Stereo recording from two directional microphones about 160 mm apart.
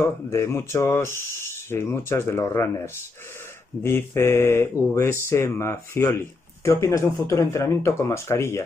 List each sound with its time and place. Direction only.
0.3 s speech: 15° left (ahead or behind)